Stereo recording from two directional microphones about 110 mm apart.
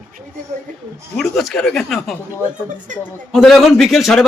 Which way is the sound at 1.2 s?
Centre (ahead or behind).